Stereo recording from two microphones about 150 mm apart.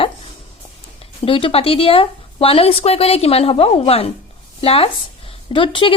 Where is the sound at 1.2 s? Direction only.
35° left (ahead or behind).